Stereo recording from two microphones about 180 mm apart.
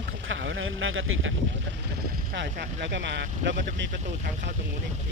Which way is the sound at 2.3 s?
70° right (ahead or behind).